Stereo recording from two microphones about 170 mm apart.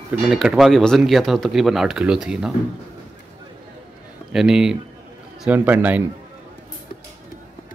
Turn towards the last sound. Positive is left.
turn(degrees=-10)  # may be behind; listen again after turning